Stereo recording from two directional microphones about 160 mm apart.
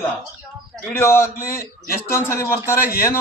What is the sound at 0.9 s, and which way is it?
Speech, 15° left (ahead or behind).